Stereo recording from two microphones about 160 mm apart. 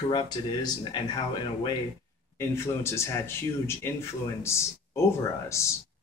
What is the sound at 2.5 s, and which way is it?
Speech, 15° left (ahead or behind).